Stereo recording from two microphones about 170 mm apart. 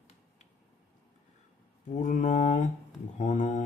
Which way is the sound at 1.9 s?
45° left (ahead or behind).